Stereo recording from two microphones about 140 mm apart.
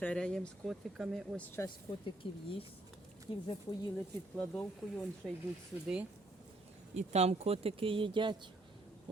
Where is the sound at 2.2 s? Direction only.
40° left (ahead or behind).